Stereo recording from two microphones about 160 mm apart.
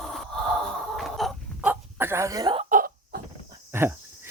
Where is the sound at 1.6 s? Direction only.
10° right (ahead or behind).